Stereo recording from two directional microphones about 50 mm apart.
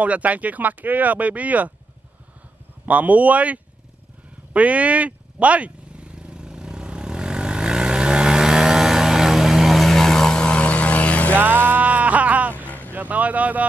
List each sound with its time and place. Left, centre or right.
0.0 s speech: right
2.9 s speech: right
4.6 s vehicle: right; by 10.4 s centre
10.4 s vehicle: left
11.3 s music: right
12.6 s vehicle: left
12.9 s vehicle: right